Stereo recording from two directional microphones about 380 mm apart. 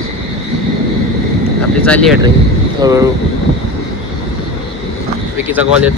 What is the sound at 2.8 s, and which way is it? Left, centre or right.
Speech, centre.